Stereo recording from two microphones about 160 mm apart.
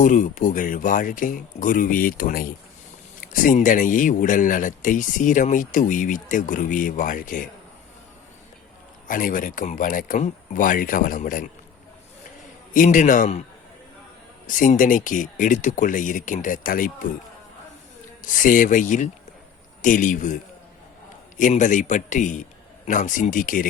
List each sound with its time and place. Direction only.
0.0 s speech: 55° left (ahead or behind)
9.0 s speech: 60° left (ahead or behind)
12.7 s a man's voice: 55° left (ahead or behind)
14.4 s speech: 55° left (ahead or behind)
18.2 s a man's voice: 55° left (ahead or behind)